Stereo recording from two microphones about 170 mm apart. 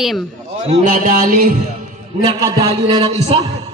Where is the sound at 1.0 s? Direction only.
50° right (ahead or behind).